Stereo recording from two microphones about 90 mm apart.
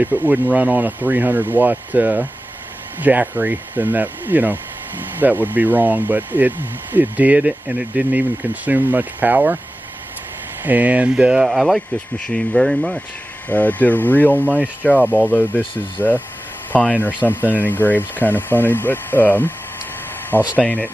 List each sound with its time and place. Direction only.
0.0 s speech: 20° right (ahead or behind)
10.6 s speech: 20° right (ahead or behind); by 13.0 s 5° left (ahead or behind)
13.5 s speech: 20° left (ahead or behind)
14.4 s speech: 20° right (ahead or behind)
15.2 s speech: 20° left (ahead or behind)
20.5 s speech: 20° left (ahead or behind)